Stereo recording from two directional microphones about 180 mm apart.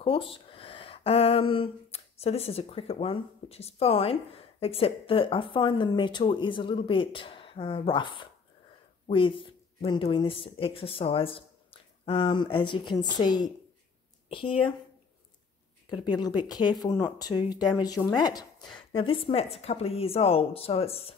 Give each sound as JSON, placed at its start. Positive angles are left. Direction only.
{"t": 0.0, "sound": "speech", "side_deg": 30}
{"t": 15.9, "sound": "speech", "side_deg": 25}